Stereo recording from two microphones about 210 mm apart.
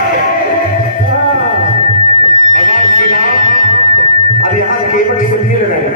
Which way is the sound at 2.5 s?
40° left (ahead or behind).